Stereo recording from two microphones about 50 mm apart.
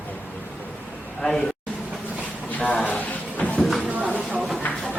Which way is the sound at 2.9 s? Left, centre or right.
Left.